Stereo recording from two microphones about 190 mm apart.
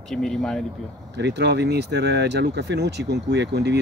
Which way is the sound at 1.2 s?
65° right (ahead or behind).